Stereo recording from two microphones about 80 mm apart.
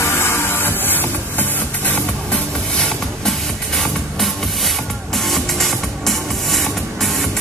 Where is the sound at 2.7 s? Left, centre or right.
Centre.